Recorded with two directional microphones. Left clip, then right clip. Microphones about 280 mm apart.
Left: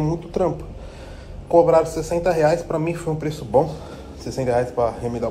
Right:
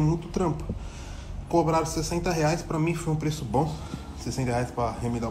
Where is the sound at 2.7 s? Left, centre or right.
Left.